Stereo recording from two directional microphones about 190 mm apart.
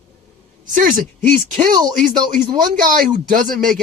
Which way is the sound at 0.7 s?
45° right (ahead or behind).